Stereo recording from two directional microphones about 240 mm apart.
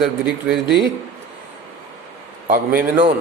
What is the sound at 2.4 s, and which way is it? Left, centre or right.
Speech, right.